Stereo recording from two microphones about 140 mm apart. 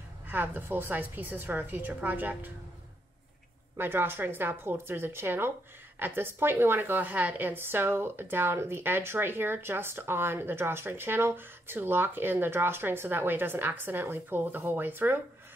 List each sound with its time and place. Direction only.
0.3 s a woman's voice: 15° right (ahead or behind)
3.7 s a woman's voice: 15° right (ahead or behind)